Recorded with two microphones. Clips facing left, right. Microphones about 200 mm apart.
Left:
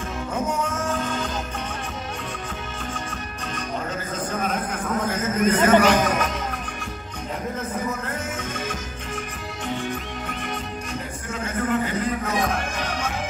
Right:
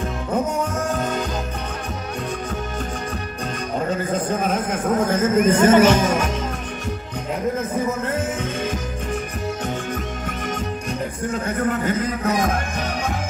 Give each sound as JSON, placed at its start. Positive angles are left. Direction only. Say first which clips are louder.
{"t": 0.8, "sound": "music", "louder": "right 3 dB", "side_deg": -40}
{"t": 4.8, "sound": "speech", "louder": "right 7 dB", "side_deg": -50}
{"t": 5.7, "sound": "speech", "louder": "right 2 dB", "side_deg": -25}
{"t": 11.8, "sound": "music", "louder": "right 3 dB", "side_deg": -45}